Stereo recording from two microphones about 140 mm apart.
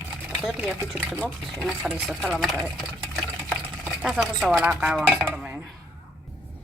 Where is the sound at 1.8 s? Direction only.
Centre (ahead or behind).